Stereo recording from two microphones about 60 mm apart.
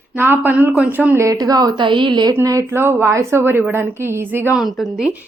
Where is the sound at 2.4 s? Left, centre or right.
Right.